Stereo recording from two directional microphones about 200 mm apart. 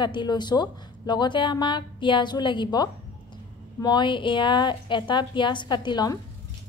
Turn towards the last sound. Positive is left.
turn(degrees=20)  # may be behind; listen again after turning